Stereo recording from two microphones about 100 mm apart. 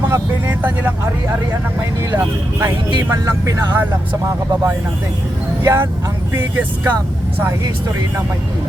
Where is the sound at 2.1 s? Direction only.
25° right (ahead or behind).